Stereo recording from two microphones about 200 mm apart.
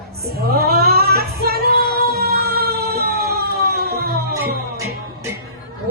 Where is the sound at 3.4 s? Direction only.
50° right (ahead or behind).